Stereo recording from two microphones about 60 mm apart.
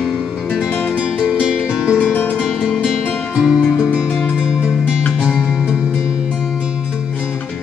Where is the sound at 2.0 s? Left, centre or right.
Left.